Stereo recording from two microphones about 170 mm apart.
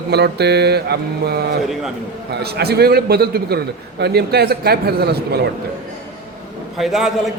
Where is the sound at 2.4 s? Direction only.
70° right (ahead or behind).